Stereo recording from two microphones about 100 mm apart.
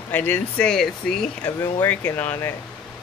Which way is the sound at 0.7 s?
5° left (ahead or behind).